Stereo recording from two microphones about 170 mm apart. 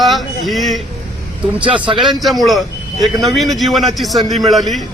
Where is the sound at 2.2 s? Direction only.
Centre (ahead or behind).